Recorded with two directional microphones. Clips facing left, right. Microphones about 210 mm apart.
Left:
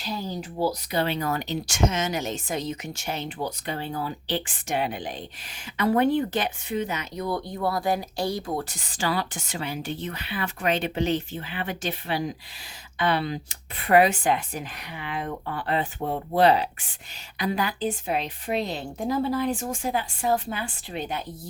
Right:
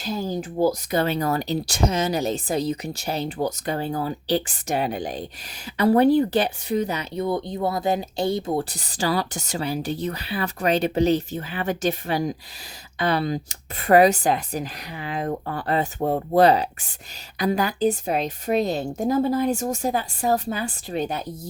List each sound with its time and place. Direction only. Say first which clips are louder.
0.0 s speech: right 5 dB; 45° right (ahead or behind)